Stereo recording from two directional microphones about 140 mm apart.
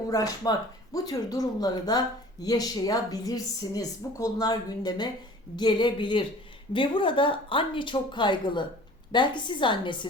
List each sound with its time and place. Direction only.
0.1 s speech: 25° left (ahead or behind)